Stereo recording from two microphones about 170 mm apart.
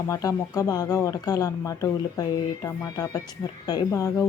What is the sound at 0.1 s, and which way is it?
Speech, 20° left (ahead or behind).